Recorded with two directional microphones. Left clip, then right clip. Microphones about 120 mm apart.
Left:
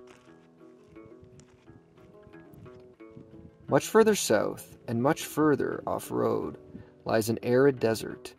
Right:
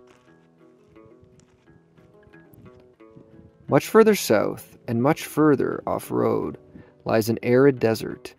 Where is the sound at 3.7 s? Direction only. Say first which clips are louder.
Right 6 dB; 35° right (ahead or behind).